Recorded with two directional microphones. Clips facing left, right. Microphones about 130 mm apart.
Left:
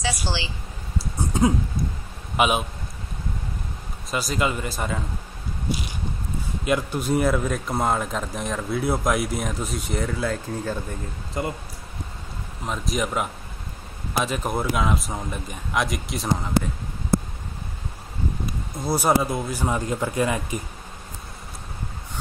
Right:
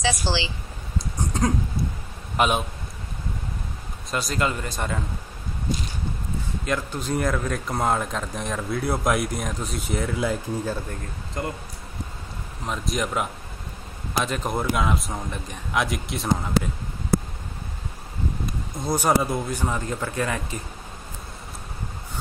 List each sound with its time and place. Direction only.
0.0 s speech: 90° right
0.9 s a sound: 5° left (ahead or behind)
2.3 s a man's voice: 5° left (ahead or behind)
4.1 s speech: centre (ahead or behind)
5.7 s a sound: 10° left (ahead or behind)
6.6 s speech: 10° left (ahead or behind)
10.1 s speech: 10° right (ahead or behind)
10.9 s speech: 5° left (ahead or behind)
12.6 s speech: centre (ahead or behind)
18.8 s speech: 5° left (ahead or behind)